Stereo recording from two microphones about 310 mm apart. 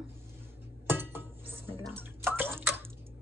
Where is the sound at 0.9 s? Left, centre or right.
Centre.